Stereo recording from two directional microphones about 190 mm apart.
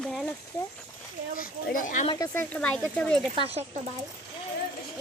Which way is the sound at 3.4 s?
30° right (ahead or behind).